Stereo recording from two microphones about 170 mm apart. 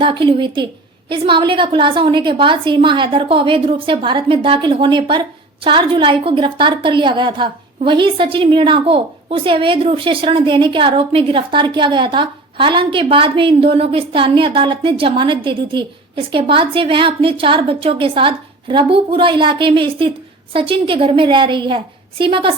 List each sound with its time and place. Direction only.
0.0 s a woman's voice: 30° right (ahead or behind)